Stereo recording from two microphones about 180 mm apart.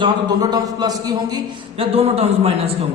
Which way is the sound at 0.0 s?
20° right (ahead or behind).